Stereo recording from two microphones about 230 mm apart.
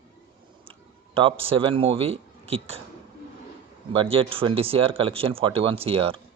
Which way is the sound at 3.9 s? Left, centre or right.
Right.